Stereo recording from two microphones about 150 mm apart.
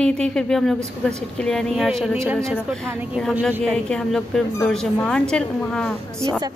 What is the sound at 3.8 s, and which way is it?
A woman's voice, 5° left (ahead or behind).